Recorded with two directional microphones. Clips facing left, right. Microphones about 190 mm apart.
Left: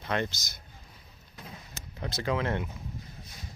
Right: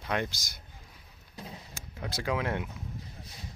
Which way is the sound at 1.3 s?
30° right (ahead or behind).